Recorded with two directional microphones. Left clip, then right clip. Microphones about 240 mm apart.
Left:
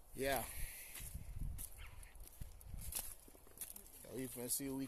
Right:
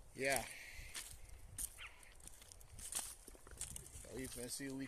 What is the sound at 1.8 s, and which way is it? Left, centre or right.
Horse, left.